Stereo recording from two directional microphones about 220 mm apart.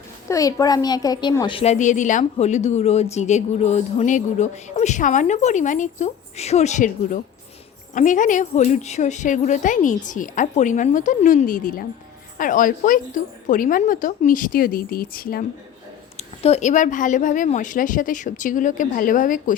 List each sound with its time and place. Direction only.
0.3 s a woman's voice: 15° left (ahead or behind); by 15.4 s 40° left (ahead or behind)
16.1 s a woman's voice: 30° left (ahead or behind)